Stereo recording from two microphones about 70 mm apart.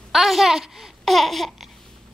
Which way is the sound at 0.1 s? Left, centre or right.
Centre.